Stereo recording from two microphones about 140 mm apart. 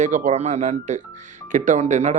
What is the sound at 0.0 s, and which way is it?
A man's voice, 65° right (ahead or behind).